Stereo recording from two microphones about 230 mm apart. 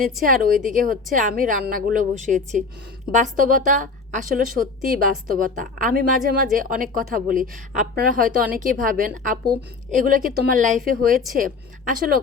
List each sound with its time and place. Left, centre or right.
0.3 s a woman's voice: right